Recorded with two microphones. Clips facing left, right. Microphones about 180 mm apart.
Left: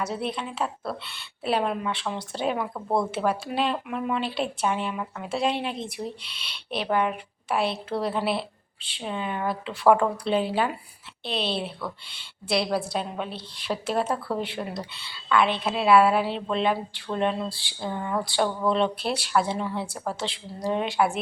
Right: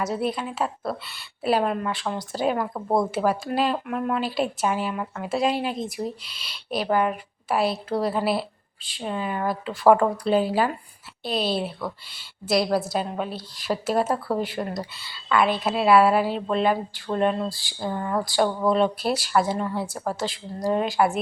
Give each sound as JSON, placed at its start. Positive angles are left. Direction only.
{"t": 0.0, "sound": "speech", "side_deg": 0}
{"t": 2.7, "sound": "a woman's voice", "side_deg": -20}
{"t": 3.2, "sound": "speech", "side_deg": 0}